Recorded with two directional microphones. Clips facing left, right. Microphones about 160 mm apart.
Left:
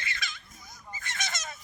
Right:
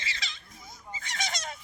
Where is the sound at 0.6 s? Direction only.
25° right (ahead or behind).